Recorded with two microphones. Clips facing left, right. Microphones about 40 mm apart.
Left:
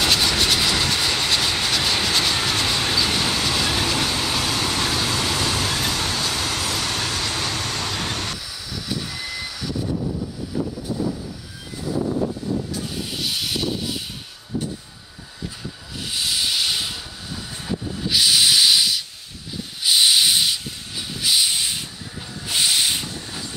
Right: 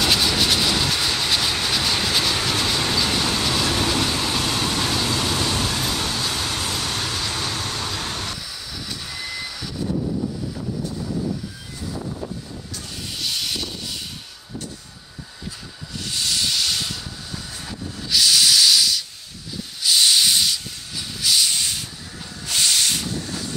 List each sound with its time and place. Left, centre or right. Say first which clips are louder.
0.0 s vehicle: even; centre
8.7 s train: left 5 dB; centre
10.9 s vehicle: even; left
12.7 s a sound: left 4 dB; centre
16.0 s hiss: even; centre
22.5 s a sound: left 1 dB; centre